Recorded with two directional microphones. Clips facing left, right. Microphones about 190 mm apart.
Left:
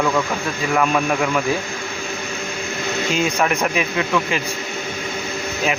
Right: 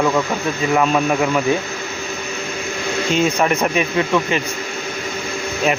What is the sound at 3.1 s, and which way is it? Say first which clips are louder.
Speech: right 3 dB; centre (ahead or behind).